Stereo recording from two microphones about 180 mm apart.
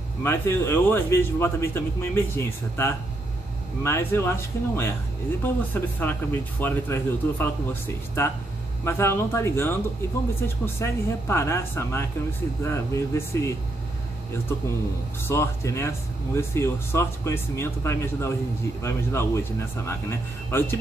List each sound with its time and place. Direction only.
0.2 s a man's voice: 15° left (ahead or behind)
15.2 s a man's voice: 15° left (ahead or behind)